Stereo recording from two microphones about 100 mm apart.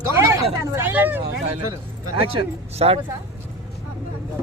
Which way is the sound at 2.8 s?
80° right.